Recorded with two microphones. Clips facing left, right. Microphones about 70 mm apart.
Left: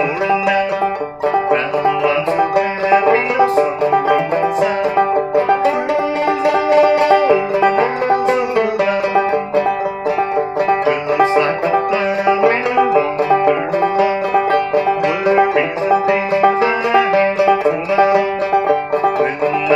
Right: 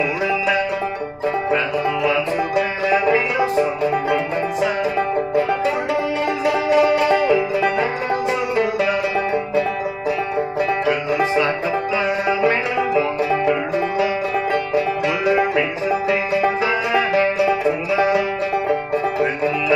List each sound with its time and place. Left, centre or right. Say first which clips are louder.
2.0 s music: left 5 dB; left
3.5 s banjo: left 5 dB; left
6.4 s music: left 4 dB; left
7.2 s music: left 4 dB; left
7.7 s banjo: left 6 dB; left
11.1 s banjo: left 5 dB; left
12.4 s music: left 5 dB; left
13.3 s music: left 5 dB; left
13.9 s banjo: left 5 dB; left
15.2 s music: left 5 dB; left
15.9 s music: left 7 dB; left